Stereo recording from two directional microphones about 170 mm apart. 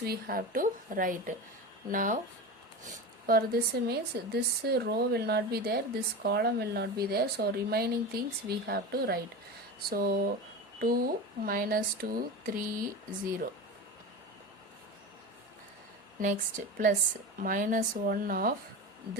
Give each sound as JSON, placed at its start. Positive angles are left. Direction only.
{"t": 0.0, "sound": "speech", "side_deg": -60}
{"t": 3.2, "sound": "speech", "side_deg": -65}
{"t": 16.2, "sound": "speech", "side_deg": -50}